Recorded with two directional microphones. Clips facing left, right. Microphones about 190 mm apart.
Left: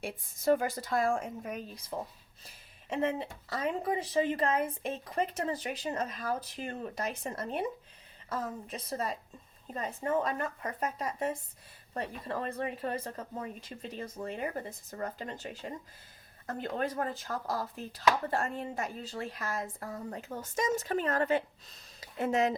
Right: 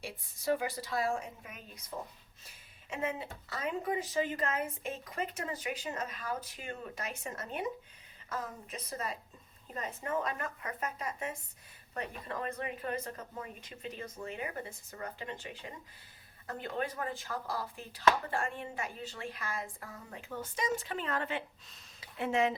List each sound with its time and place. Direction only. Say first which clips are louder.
0.0 s a woman's voice: left 6 dB; 50° left (ahead or behind)
2.9 s a woman's voice: left 5 dB; 35° left (ahead or behind)